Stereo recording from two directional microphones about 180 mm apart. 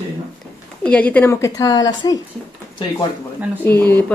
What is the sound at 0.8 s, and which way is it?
A woman's voice, 5° left (ahead or behind).